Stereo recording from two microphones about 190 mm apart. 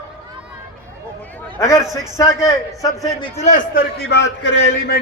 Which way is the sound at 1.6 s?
15° left (ahead or behind).